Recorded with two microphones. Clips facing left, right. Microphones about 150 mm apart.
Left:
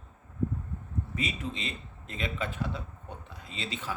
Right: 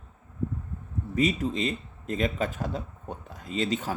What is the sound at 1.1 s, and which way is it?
Speech, 40° right (ahead or behind).